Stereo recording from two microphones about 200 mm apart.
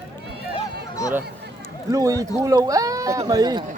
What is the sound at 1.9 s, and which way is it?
Speech, 15° right (ahead or behind).